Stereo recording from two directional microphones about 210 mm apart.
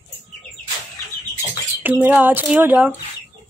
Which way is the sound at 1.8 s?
10° right (ahead or behind).